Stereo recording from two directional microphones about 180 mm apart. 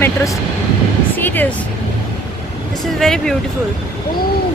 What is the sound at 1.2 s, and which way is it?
Speech, 10° left (ahead or behind).